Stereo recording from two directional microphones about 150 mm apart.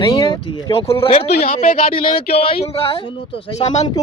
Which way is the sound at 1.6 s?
70° left (ahead or behind).